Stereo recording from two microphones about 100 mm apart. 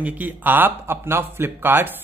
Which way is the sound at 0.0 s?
15° right (ahead or behind).